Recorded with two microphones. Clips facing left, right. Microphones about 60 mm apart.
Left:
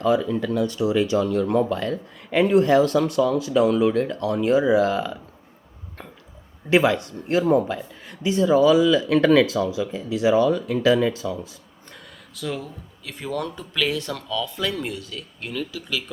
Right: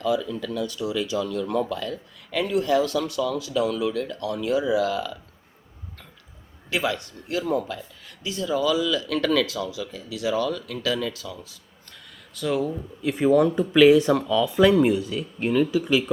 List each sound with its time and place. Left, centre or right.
0.0 s speech: left
6.7 s speech: left
12.3 s speech: centre
13.0 s speech: centre